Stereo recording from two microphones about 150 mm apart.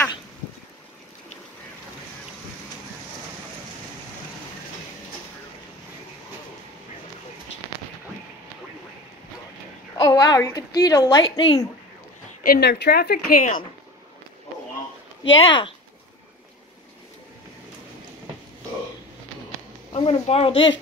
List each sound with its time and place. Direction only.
9.9 s a woman's voice: 30° left (ahead or behind)
11.2 s a woman's voice: 35° left (ahead or behind)
12.4 s speech: 90° left; by 13.6 s 65° left (ahead or behind)
15.4 s speech: 35° left (ahead or behind)
19.9 s speech: 40° left (ahead or behind)